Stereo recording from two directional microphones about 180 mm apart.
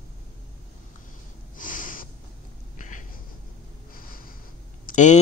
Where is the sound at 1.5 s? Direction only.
45° left (ahead or behind).